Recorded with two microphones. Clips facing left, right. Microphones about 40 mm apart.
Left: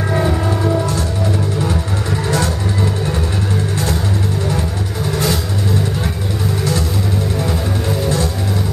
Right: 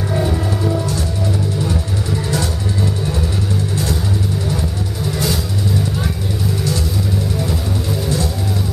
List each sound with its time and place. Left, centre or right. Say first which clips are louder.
0.1 s music: left 2 dB; left
2.2 s music: left 5 dB; left